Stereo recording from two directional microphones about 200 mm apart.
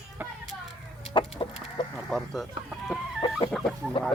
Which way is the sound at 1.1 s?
25° left (ahead or behind).